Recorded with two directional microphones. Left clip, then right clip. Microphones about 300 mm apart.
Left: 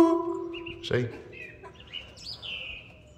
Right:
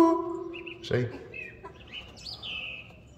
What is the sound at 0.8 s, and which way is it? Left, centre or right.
Speech, centre.